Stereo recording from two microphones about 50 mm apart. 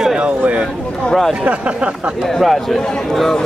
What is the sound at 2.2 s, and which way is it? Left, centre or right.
A man's voice, centre.